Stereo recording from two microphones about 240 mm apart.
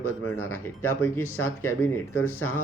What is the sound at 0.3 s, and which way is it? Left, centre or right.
Speech, left.